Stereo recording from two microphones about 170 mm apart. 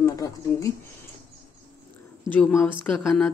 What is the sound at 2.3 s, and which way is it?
Speech, 10° left (ahead or behind).